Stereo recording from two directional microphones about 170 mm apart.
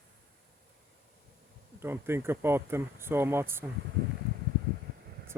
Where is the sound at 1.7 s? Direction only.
15° right (ahead or behind).